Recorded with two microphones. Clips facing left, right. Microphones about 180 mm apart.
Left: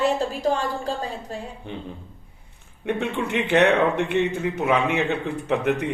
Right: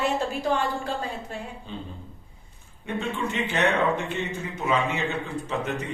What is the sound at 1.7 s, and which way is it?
Speech, 65° left (ahead or behind).